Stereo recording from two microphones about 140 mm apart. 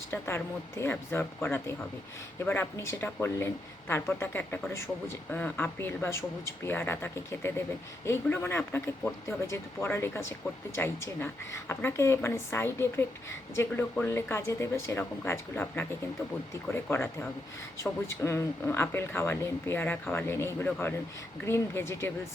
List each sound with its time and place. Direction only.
0.1 s speech: 20° left (ahead or behind)
18.2 s speech: 20° left (ahead or behind)